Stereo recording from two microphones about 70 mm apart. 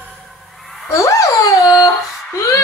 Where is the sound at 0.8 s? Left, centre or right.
Left.